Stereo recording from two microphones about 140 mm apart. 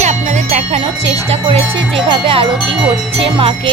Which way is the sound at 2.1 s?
40° right (ahead or behind).